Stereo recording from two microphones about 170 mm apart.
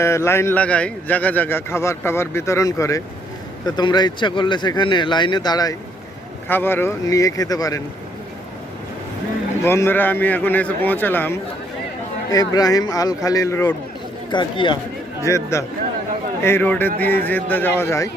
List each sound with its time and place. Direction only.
0.0 s a man's voice: 15° left (ahead or behind)
6.5 s speech: 10° left (ahead or behind)
9.6 s a man's voice: 15° left (ahead or behind)
12.3 s speech: 20° left (ahead or behind)
14.3 s speech: 25° left (ahead or behind)
15.2 s a man's voice: 15° left (ahead or behind)